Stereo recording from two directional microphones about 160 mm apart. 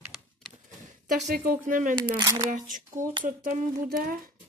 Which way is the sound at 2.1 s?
25° right (ahead or behind).